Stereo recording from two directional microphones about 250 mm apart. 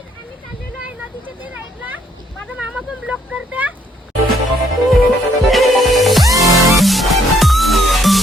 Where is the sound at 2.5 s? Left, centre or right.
Centre.